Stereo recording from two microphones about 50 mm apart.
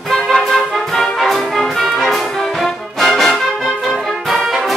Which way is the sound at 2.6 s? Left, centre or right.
Centre.